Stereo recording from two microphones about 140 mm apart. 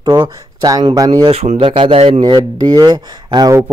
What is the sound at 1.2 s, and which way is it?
Speech, 45° right (ahead or behind).